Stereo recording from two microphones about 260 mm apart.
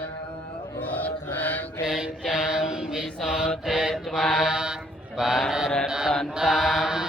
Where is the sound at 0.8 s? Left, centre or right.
Centre.